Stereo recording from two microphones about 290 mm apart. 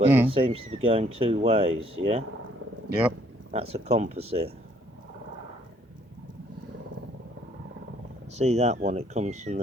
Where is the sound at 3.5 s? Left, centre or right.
Right.